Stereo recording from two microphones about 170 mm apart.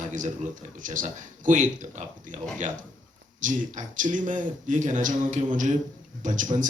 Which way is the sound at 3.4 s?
50° right (ahead or behind).